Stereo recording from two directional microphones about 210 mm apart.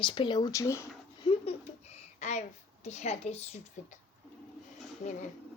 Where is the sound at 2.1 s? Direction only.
35° left (ahead or behind).